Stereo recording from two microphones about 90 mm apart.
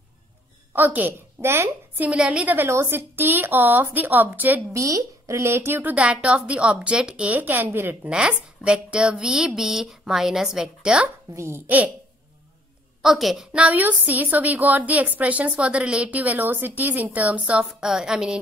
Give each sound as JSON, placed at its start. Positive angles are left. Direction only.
{"t": 0.7, "sound": "a woman's voice", "side_deg": -20}
{"t": 2.0, "sound": "speech", "side_deg": -10}
{"t": 2.5, "sound": "speech", "side_deg": -25}
{"t": 4.7, "sound": "a woman's voice", "side_deg": -35}
{"t": 11.3, "sound": "speech", "side_deg": -30}
{"t": 13.0, "sound": "speech", "side_deg": -5}